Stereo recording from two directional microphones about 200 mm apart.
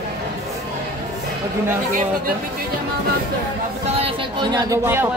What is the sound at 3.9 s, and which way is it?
Speech, 25° right (ahead or behind).